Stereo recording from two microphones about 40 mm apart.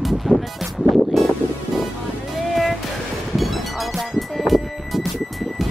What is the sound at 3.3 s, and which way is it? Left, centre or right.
Music, centre.